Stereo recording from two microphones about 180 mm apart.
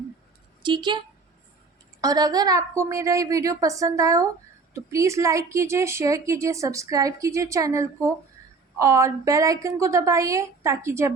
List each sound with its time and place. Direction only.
0.6 s a woman's voice: 25° right (ahead or behind)